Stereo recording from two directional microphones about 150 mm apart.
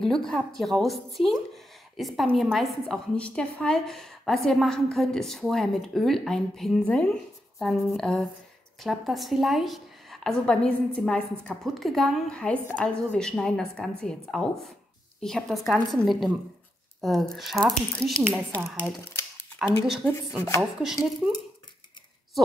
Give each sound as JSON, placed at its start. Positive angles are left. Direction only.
{"t": 0.0, "sound": "a woman's voice", "side_deg": 5}
{"t": 20.1, "sound": "speech", "side_deg": 15}
{"t": 20.8, "sound": "a woman's voice", "side_deg": -5}